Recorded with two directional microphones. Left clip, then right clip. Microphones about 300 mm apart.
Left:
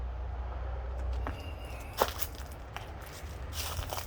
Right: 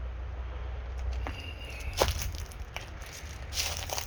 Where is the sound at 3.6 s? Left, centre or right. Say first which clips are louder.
Right 5 dB; right.